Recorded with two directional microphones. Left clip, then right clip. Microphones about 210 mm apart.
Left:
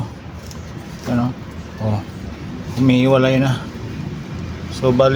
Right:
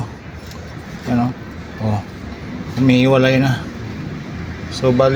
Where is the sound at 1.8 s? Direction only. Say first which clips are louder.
Right 1 dB; 10° right (ahead or behind).